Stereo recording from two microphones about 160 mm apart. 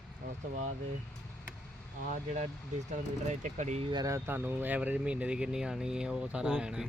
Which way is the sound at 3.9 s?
20° right (ahead or behind).